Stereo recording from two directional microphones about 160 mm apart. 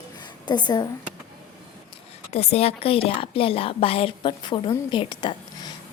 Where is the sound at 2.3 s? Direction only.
40° left (ahead or behind).